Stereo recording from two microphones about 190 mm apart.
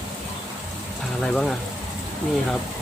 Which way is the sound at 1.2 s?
5° left (ahead or behind).